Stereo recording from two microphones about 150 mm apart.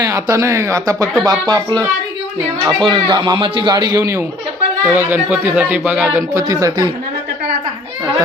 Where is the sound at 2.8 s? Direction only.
30° right (ahead or behind).